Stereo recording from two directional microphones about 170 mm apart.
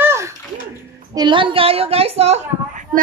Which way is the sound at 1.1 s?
30° right (ahead or behind).